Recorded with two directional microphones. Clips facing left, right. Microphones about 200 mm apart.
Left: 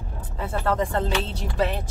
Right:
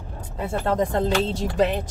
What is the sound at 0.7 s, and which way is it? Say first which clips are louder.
Speech: right 4 dB; 45° right (ahead or behind).